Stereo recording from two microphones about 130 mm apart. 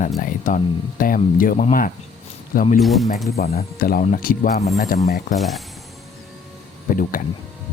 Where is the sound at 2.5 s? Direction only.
90° left.